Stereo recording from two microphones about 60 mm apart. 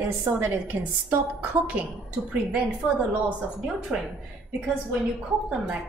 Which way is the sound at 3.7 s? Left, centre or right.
Centre.